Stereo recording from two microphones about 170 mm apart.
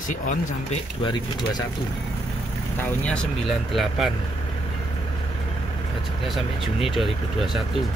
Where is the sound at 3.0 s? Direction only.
5° left (ahead or behind).